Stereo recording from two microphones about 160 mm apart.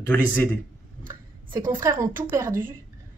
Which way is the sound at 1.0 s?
60° right (ahead or behind).